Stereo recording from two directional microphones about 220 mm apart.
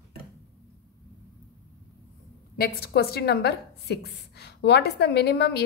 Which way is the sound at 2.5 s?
45° left (ahead or behind).